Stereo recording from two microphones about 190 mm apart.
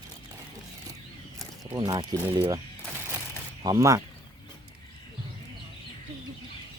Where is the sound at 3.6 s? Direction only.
20° right (ahead or behind).